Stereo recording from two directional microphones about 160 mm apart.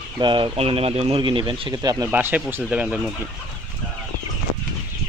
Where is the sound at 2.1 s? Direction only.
10° right (ahead or behind).